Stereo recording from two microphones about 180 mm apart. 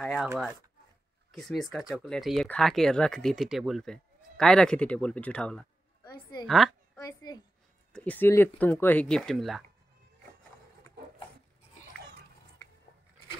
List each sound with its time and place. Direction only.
0.0 s speech: centre (ahead or behind)
1.3 s speech: centre (ahead or behind)
7.0 s a child's voice: 20° left (ahead or behind)
7.9 s speech: 10° left (ahead or behind)